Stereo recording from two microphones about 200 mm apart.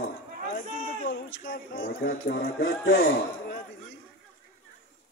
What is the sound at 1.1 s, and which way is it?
Speech, 60° left (ahead or behind).